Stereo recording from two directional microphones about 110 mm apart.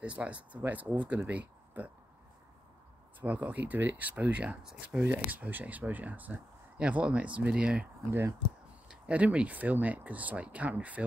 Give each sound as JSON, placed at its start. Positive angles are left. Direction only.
{"t": 0.0, "sound": "speech", "side_deg": -10}
{"t": 3.2, "sound": "speech", "side_deg": -15}
{"t": 8.1, "sound": "speech", "side_deg": -25}
{"t": 8.8, "sound": "speech", "side_deg": -10}